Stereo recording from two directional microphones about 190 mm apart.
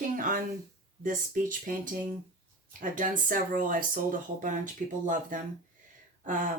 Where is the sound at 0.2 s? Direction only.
45° right (ahead or behind).